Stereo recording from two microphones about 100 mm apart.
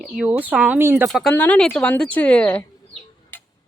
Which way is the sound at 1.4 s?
10° left (ahead or behind).